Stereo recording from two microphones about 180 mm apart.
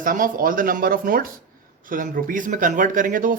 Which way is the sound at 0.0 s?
50° right (ahead or behind).